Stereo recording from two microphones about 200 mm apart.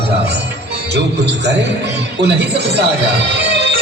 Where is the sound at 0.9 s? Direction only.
55° right (ahead or behind).